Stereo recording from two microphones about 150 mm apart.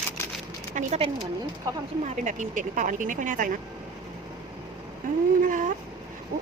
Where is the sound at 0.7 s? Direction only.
55° right (ahead or behind).